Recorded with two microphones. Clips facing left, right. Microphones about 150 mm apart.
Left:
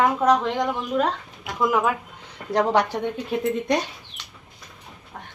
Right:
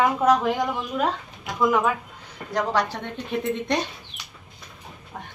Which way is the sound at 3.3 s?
5° left (ahead or behind).